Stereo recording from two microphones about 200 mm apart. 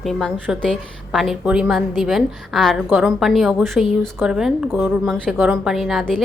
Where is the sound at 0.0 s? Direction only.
Centre (ahead or behind).